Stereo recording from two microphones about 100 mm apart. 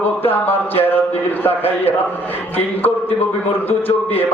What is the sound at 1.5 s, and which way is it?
Speech, 20° left (ahead or behind).